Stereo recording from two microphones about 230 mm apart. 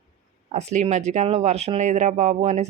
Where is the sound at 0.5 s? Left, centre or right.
Right.